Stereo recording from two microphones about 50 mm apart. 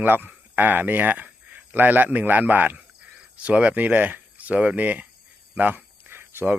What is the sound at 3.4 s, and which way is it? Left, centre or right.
Speech, right.